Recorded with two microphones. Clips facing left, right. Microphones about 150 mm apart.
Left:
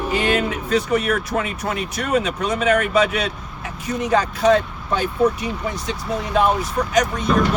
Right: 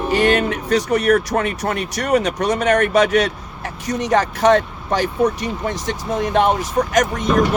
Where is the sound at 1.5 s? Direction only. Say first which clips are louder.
Right 3 dB; 55° right (ahead or behind).